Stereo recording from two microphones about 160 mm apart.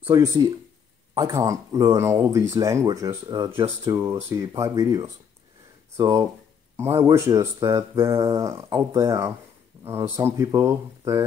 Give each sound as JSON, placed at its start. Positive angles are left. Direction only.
{"t": 0.0, "sound": "speech", "side_deg": -25}